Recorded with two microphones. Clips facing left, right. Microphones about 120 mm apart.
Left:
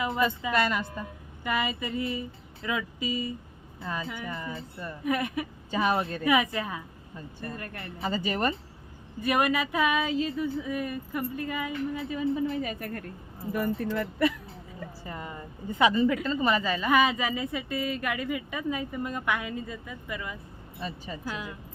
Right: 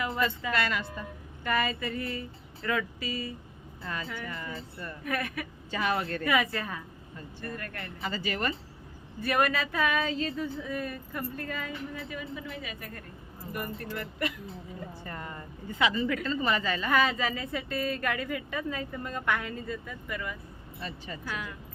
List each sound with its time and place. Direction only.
0.0 s a woman's voice: 20° left (ahead or behind)
12.6 s a woman's voice: 55° left (ahead or behind)
15.0 s a woman's voice: 10° left (ahead or behind)